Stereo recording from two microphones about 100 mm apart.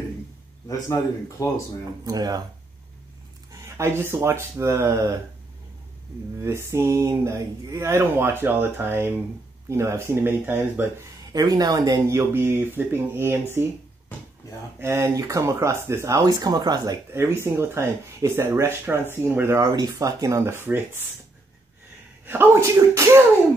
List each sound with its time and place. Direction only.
1.4 s speech: 35° left (ahead or behind)
2.0 s speech: 40° right (ahead or behind)
3.5 s speech: 30° right (ahead or behind)
6.4 s speech: 25° right (ahead or behind)
11.1 s speech: 40° right (ahead or behind)
12.1 s speech: 25° right (ahead or behind)
14.4 s a sound: 35° left (ahead or behind)
14.8 s speech: 25° right (ahead or behind)
17.1 s speech: 25° right (ahead or behind)
19.7 s speech: 40° right (ahead or behind); by 21.0 s 20° right (ahead or behind)
22.2 s speech: 20° right (ahead or behind)